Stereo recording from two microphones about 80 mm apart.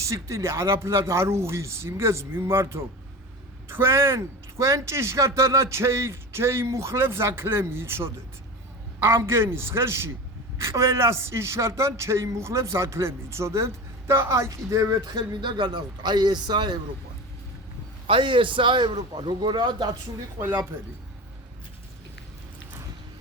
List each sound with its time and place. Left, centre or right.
0.0 s a man's voice: right
15.3 s a man's voice: right
18.1 s a man's voice: right